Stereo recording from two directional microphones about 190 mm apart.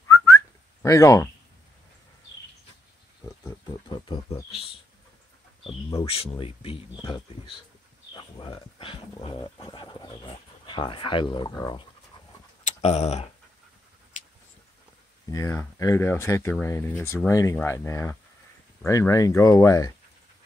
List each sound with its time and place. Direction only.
0.8 s speech: 15° left (ahead or behind)
3.4 s speech: 25° left (ahead or behind)
5.9 s speech: 30° left (ahead or behind)
12.8 s tick-tock: 35° left (ahead or behind)
15.3 s speech: 15° left (ahead or behind)